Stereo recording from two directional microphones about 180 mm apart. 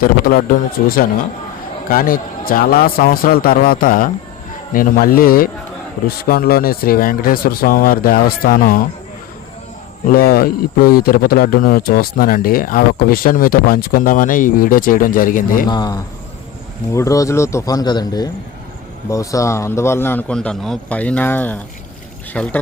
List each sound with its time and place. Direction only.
0.0 s speech: 55° left (ahead or behind)
10.1 s speech: 55° left (ahead or behind)
15.7 s a man's voice: 25° left (ahead or behind); by 22.5 s 5° left (ahead or behind)